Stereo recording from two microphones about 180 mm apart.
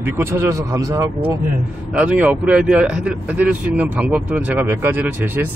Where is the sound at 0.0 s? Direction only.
15° right (ahead or behind).